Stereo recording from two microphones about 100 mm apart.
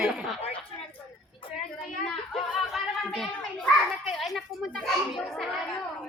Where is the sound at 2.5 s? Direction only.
Centre (ahead or behind).